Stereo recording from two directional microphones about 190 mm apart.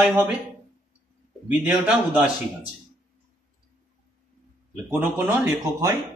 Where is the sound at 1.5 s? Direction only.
5° right (ahead or behind).